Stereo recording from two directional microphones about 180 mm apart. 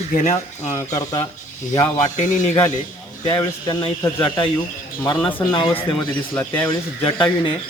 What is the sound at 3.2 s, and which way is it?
Speech, 25° left (ahead or behind).